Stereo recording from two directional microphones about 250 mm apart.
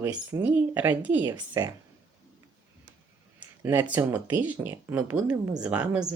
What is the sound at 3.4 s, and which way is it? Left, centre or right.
Speech, centre.